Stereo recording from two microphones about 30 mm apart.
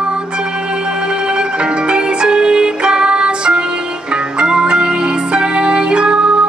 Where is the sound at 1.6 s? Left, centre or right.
Right.